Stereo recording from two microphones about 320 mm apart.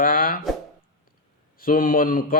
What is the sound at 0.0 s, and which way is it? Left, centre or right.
Plop, left.